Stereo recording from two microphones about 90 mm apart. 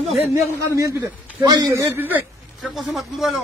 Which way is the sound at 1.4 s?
50° right (ahead or behind).